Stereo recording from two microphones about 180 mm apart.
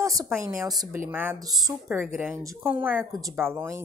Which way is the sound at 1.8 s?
10° right (ahead or behind).